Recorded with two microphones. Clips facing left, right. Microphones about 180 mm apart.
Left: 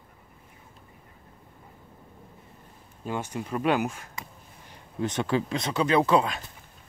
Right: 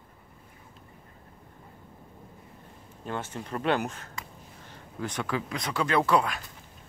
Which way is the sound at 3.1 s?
10° left (ahead or behind).